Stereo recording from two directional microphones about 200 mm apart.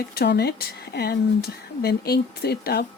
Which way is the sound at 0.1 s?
55° left (ahead or behind).